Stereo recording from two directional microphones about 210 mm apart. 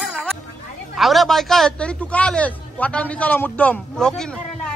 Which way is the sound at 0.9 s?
Centre (ahead or behind).